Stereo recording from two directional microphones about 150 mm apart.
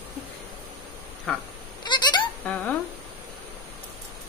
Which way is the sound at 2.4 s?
10° left (ahead or behind).